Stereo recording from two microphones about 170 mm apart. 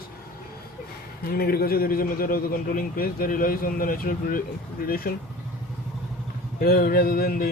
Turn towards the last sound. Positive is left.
turn(degrees=60)  # may be behind; listen again after turning